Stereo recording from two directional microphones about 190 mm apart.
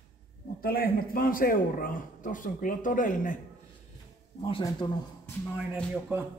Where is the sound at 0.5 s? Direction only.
50° left (ahead or behind).